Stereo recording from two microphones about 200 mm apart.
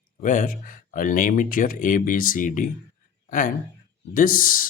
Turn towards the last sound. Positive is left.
turn(degrees=45)  # may be behind; listen again after turning